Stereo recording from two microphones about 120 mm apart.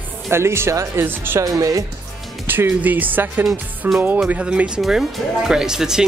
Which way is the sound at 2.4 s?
15° right (ahead or behind).